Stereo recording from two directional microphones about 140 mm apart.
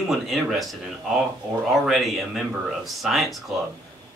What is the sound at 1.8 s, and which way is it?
A woman's voice, centre (ahead or behind).